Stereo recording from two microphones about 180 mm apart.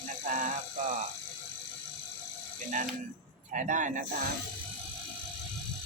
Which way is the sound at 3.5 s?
45° right (ahead or behind).